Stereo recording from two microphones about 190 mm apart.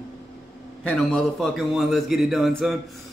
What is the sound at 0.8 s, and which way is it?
A man's voice, 5° left (ahead or behind).